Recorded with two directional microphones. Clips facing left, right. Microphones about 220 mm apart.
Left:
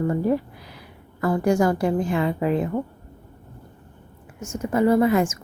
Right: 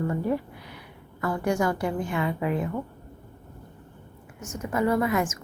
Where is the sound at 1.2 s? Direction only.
35° left (ahead or behind).